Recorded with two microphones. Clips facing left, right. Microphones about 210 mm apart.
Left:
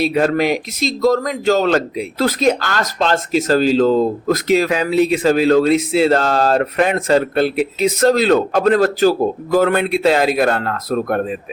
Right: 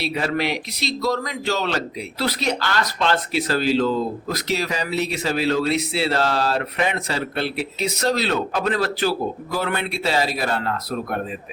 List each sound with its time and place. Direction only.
0.0 s speech: 45° left (ahead or behind)